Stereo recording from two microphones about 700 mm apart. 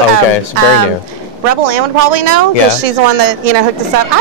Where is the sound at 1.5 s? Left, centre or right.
Right.